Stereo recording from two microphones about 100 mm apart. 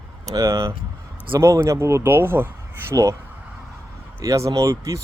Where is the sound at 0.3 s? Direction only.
35° right (ahead or behind).